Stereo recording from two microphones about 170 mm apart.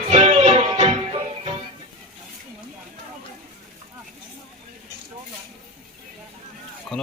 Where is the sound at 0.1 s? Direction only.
35° right (ahead or behind).